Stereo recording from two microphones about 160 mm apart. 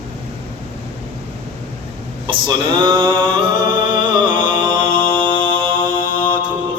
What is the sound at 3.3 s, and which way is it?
Music, 30° right (ahead or behind).